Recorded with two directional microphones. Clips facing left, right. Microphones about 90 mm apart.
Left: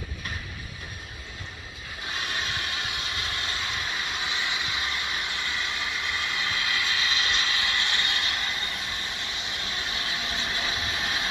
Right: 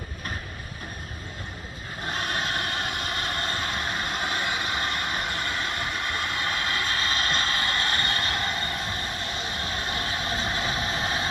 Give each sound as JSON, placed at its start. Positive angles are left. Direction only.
{"t": 2.0, "sound": "vehicle", "side_deg": -45}
{"t": 9.8, "sound": "train", "side_deg": -40}